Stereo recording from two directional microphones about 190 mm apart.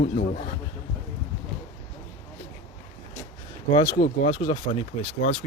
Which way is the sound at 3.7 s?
25° left (ahead or behind).